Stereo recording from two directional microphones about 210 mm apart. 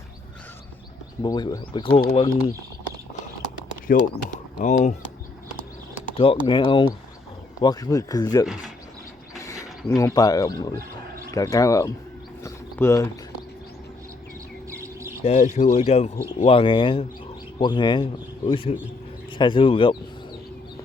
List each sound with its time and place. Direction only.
1.2 s speech: 20° left (ahead or behind)
2.0 s speech: 30° left (ahead or behind)
3.8 s speech: 40° left (ahead or behind)
6.1 s speech: 25° left (ahead or behind)
12.4 s a sound: 15° left (ahead or behind)
14.8 s bird: 10° right (ahead or behind)
15.2 s a man's voice: 30° left (ahead or behind)